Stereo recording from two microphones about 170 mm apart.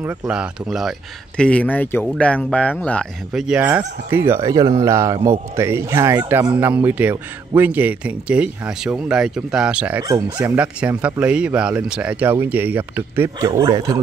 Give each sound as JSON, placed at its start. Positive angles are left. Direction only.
{"t": 0.3, "sound": "speech", "side_deg": -5}